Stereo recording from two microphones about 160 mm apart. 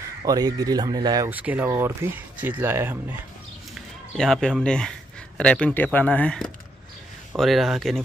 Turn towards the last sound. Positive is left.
turn(degrees=0)  # may be behind; listen again after turning